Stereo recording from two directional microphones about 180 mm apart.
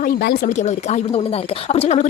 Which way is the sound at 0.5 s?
40° left (ahead or behind).